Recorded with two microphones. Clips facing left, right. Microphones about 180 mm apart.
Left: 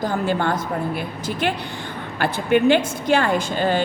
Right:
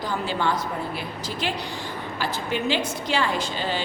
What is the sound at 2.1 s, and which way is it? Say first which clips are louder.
A woman's voice: left 10 dB; 60° left (ahead or behind).